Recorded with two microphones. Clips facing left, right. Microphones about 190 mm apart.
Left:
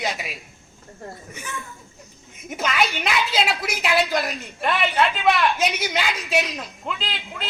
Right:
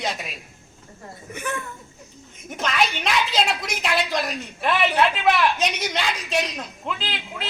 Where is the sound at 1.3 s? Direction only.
60° right (ahead or behind).